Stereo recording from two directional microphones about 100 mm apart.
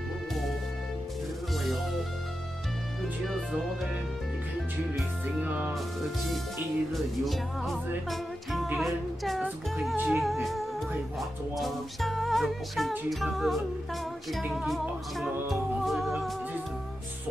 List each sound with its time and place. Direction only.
5.4 s speech: 15° right (ahead or behind)
6.9 s music: centre (ahead or behind)